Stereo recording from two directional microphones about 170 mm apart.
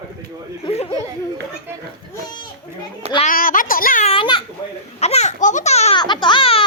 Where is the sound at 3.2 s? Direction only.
55° left (ahead or behind).